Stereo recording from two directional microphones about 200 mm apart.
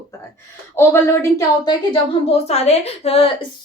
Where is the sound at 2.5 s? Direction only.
30° left (ahead or behind).